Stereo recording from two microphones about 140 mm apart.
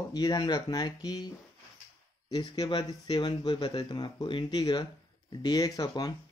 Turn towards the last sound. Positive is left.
turn(degrees=30)  # may be behind; listen again after turning